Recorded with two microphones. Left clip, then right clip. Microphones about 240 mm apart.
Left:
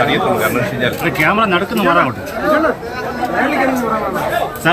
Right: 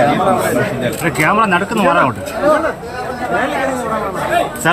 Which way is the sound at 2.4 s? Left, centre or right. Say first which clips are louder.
Right 1 dB; right.